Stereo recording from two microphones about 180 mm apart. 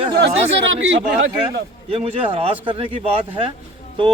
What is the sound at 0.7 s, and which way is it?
Speech, 90° right.